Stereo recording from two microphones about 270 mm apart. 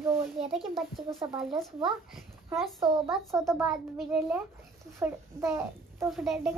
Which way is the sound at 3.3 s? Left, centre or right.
Centre.